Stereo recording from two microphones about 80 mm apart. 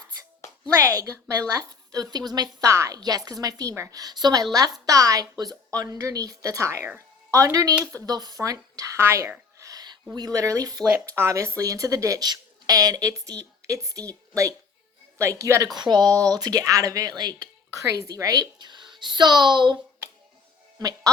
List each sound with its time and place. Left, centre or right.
0.8 s speech: right
4.9 s speech: right
8.0 s a woman's voice: right
9.6 s a sound: right
10.2 s speech: right
10.9 s a woman's voice: right
15.7 s speech: right
17.7 s speech: right
20.7 s speech: right